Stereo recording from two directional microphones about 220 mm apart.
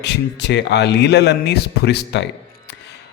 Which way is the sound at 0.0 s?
50° left (ahead or behind).